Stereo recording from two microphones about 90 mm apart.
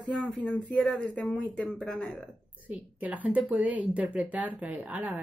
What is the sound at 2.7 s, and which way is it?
A woman's voice, 15° right (ahead or behind).